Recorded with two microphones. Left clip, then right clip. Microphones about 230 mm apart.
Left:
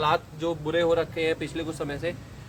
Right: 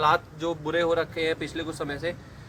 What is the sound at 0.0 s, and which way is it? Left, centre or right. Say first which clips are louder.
A man's voice: right 2 dB; centre.